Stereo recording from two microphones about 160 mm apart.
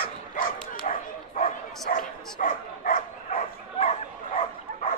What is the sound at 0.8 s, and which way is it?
Bow-wow, 55° left (ahead or behind).